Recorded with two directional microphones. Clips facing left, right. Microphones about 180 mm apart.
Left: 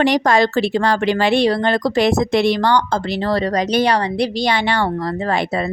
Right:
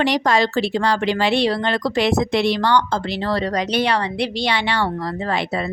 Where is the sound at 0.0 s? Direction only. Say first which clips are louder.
Left 3 dB; 50° left (ahead or behind).